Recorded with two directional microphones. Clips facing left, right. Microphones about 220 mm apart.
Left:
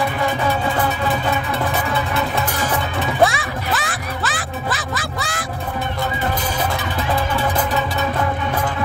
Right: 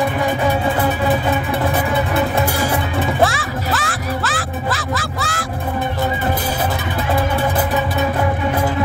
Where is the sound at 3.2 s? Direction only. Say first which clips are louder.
Left 4 dB; centre (ahead or behind).